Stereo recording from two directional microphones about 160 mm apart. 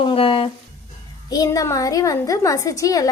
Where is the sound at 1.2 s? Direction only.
20° left (ahead or behind).